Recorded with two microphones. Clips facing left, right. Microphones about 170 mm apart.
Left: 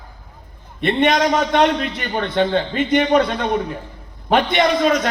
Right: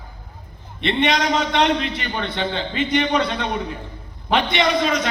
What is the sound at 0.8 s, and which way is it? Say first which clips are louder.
A man's voice: left 4 dB; 50° left (ahead or behind).